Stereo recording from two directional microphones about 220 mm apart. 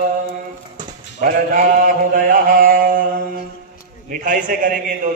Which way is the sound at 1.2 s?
40° right (ahead or behind).